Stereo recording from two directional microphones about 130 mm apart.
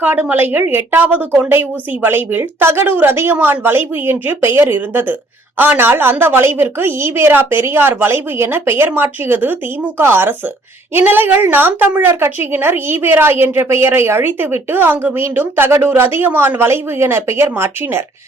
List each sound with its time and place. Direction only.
0.0 s a woman's voice: 10° right (ahead or behind)